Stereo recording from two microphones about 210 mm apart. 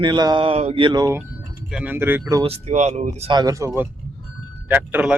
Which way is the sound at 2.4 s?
30° right (ahead or behind).